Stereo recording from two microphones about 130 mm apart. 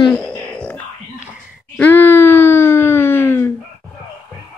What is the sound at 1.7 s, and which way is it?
Wail, 15° left (ahead or behind).